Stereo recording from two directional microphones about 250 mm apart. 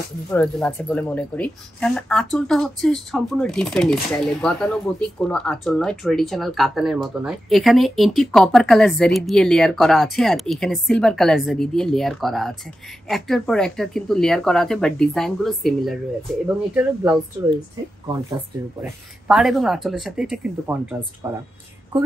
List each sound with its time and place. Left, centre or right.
0.3 s speech: centre
18.8 s speech: centre